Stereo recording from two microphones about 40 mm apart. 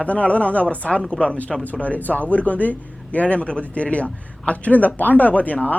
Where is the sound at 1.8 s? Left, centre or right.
Left.